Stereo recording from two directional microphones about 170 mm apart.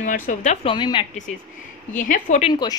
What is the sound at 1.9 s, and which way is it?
Speech, 50° left (ahead or behind).